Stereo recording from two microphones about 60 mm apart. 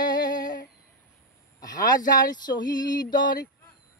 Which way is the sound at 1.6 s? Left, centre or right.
Left.